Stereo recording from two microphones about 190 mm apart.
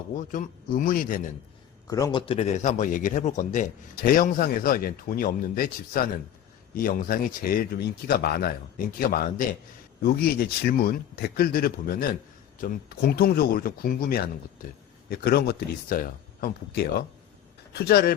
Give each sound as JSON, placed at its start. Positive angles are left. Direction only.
{"t": 0.2, "sound": "speech", "side_deg": 45}
{"t": 1.9, "sound": "speech", "side_deg": 20}